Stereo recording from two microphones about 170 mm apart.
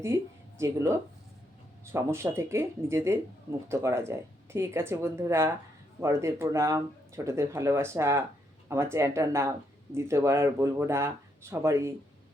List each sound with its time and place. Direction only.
0.6 s speech: 15° right (ahead or behind)